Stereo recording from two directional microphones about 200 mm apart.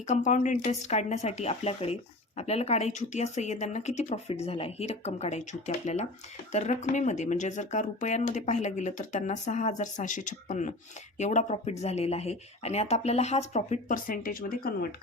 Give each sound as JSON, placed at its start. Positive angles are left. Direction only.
{"t": 0.1, "sound": "speech", "side_deg": 40}